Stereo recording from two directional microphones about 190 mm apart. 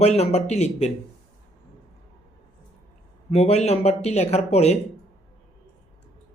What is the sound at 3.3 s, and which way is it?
Speech, 35° left (ahead or behind).